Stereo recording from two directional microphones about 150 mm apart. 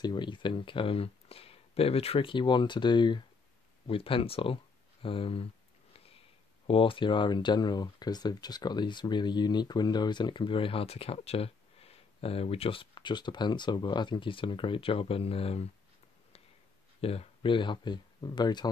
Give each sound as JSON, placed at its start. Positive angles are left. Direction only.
{"t": 0.0, "sound": "speech", "side_deg": 30}
{"t": 6.7, "sound": "speech", "side_deg": 35}
{"t": 17.0, "sound": "speech", "side_deg": 40}